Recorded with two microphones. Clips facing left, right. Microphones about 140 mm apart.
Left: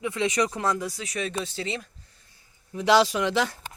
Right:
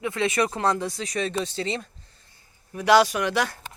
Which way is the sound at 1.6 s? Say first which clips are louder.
Right 3 dB; 35° right (ahead or behind).